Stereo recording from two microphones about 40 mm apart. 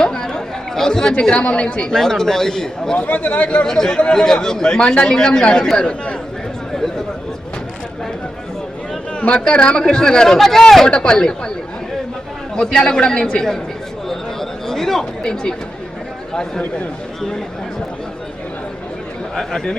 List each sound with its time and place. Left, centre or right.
0.0 s chatter: centre
1.3 s speech: left
1.8 s speech: centre
3.1 s speech: left
3.7 s speech: centre
9.5 s speech: left; by 10.8 s centre
10.8 s speech: left
12.5 s speech: centre
14.7 s chatter: centre
19.4 s speech: centre